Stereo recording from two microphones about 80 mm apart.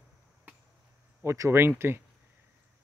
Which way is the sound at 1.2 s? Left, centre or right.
Right.